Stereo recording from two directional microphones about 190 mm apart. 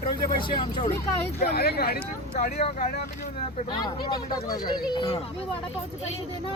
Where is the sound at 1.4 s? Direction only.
55° left (ahead or behind).